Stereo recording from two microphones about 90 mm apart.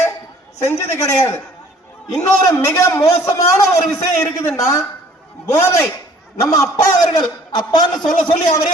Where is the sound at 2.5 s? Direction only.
40° left (ahead or behind).